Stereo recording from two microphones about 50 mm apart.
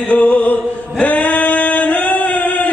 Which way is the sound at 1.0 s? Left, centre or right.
Left.